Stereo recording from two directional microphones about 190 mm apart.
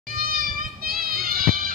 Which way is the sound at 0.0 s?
50° right (ahead or behind).